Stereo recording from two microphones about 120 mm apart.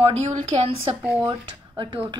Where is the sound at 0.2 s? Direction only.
70° right (ahead or behind).